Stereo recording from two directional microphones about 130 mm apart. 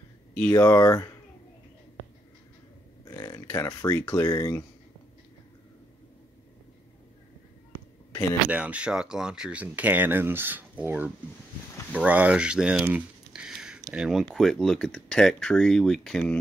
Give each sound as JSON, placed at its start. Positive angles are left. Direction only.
{"t": 0.3, "sound": "speech", "side_deg": 10}
{"t": 0.6, "sound": "speech", "side_deg": 25}
{"t": 3.1, "sound": "speech", "side_deg": 30}
{"t": 8.1, "sound": "a sound", "side_deg": 20}
{"t": 8.5, "sound": "speech", "side_deg": -10}